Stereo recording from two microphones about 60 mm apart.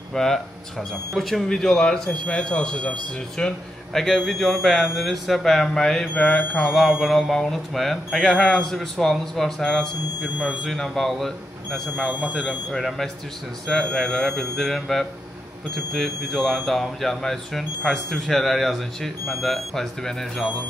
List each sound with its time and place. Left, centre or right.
0.1 s speech: centre
6.1 s mantra: left
6.7 s speech: centre
12.1 s speech: right
12.4 s speech: centre